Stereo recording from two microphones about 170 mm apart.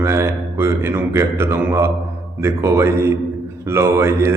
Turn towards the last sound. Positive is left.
turn(degrees=-15)  # may be behind; listen again after turning